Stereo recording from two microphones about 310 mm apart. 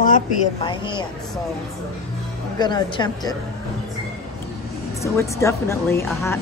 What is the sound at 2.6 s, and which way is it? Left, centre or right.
Speech, centre.